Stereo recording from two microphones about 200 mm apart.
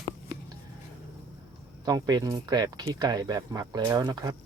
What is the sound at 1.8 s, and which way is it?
Speech, 20° right (ahead or behind).